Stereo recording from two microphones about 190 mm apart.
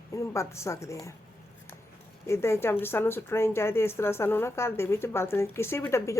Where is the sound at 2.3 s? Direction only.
15° left (ahead or behind).